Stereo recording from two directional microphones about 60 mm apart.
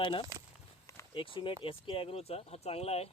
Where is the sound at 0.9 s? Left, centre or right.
Left.